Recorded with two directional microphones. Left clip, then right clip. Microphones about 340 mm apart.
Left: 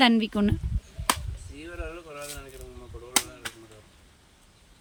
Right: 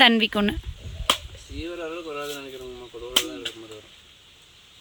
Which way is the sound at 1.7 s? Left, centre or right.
Centre.